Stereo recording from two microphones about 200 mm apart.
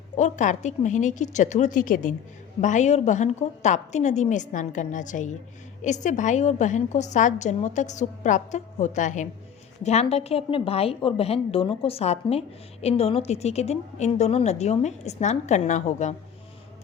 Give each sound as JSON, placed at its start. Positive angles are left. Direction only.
{"t": 0.2, "sound": "a woman's voice", "side_deg": 35}